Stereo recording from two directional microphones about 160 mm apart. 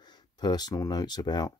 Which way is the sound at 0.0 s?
25° left (ahead or behind).